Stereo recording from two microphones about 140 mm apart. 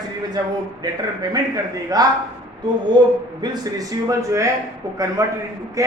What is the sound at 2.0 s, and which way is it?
Speech, 25° right (ahead or behind).